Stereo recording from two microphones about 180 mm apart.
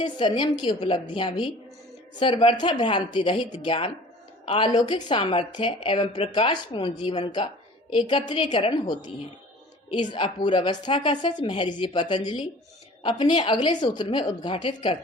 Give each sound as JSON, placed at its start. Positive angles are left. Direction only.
{"t": 0.0, "sound": "a woman's voice", "side_deg": 25}